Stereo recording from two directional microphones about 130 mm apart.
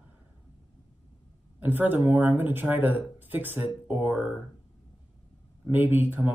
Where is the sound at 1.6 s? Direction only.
15° right (ahead or behind).